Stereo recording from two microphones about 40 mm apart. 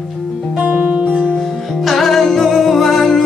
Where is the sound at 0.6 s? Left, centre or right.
Right.